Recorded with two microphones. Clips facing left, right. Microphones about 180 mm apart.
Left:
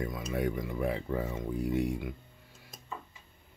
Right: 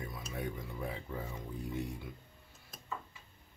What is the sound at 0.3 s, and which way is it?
Speech, 90° left.